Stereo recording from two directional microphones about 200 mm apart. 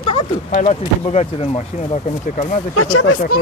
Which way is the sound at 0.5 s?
40° left (ahead or behind).